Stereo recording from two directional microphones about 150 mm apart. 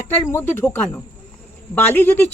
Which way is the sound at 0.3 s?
15° left (ahead or behind).